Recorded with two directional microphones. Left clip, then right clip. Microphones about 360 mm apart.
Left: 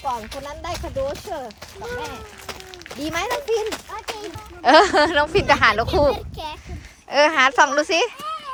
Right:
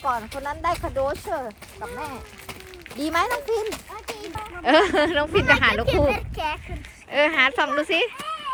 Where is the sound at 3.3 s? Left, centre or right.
Left.